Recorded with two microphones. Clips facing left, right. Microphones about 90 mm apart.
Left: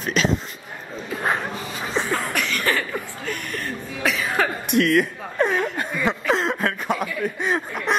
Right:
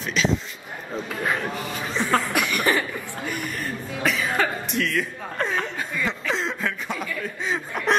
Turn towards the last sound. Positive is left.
turn(degrees=55)  # may be behind; listen again after turning